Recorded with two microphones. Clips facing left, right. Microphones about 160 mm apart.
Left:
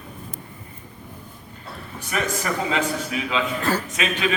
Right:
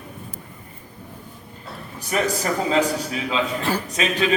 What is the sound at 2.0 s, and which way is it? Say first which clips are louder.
Speech: right 3 dB; 35° right (ahead or behind).